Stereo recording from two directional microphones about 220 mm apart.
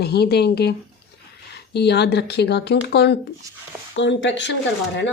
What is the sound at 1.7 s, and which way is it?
A woman's voice, 50° left (ahead or behind).